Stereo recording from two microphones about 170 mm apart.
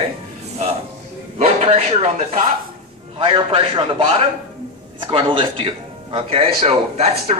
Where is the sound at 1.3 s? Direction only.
40° right (ahead or behind).